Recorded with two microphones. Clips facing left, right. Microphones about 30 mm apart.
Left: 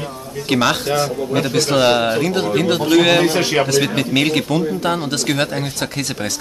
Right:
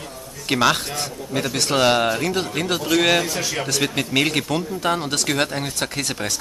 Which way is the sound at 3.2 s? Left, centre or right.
Left.